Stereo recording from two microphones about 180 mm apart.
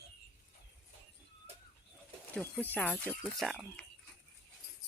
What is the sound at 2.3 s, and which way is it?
Speech, 10° left (ahead or behind).